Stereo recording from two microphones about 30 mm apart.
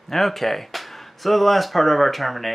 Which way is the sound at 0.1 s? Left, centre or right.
Centre.